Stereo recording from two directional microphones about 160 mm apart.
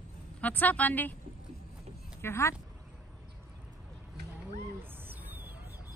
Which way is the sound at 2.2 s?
15° left (ahead or behind).